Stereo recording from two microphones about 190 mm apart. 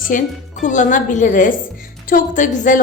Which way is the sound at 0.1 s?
45° left (ahead or behind).